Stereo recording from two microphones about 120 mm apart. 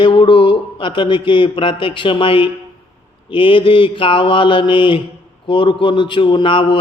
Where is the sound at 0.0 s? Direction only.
45° left (ahead or behind).